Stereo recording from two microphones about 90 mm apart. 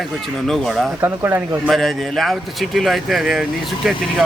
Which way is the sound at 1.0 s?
25° right (ahead or behind).